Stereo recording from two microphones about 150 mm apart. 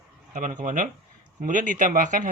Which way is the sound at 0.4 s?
60° right (ahead or behind).